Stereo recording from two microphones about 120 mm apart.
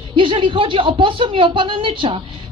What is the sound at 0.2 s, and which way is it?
A woman's voice, 45° right (ahead or behind).